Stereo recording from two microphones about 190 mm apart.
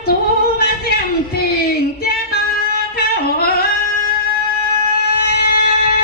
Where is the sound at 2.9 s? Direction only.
55° left (ahead or behind).